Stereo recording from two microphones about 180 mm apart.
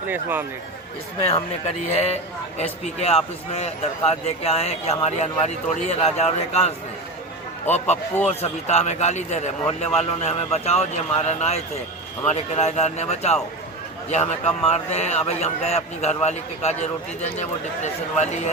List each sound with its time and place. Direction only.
0.1 s speech: 10° right (ahead or behind)
1.2 s a man's voice: 35° left (ahead or behind)
8.3 s a man's voice: 35° left (ahead or behind)